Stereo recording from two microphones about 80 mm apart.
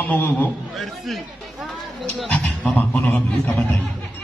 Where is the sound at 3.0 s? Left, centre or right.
Left.